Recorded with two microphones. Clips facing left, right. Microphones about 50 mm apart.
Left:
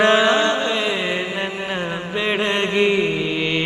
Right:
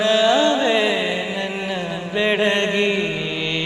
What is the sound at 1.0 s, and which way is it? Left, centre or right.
Mantra, centre.